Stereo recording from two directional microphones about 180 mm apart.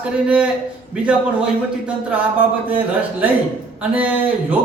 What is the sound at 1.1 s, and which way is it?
Speech, 5° right (ahead or behind).